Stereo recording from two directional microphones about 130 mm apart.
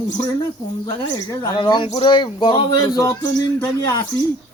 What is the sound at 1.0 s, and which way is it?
Speech, 40° left (ahead or behind).